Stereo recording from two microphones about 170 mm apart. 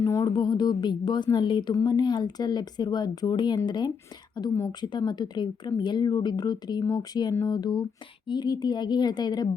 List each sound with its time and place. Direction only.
0.0 s speech: 20° left (ahead or behind)